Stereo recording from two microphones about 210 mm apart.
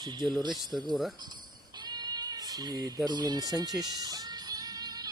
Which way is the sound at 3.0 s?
20° right (ahead or behind).